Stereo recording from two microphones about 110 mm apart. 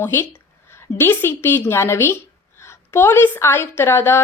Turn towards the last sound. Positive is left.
turn(degrees=20)  # may be behind; listen again after turning